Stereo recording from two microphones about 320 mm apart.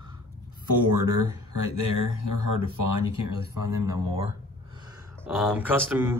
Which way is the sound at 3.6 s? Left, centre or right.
Centre.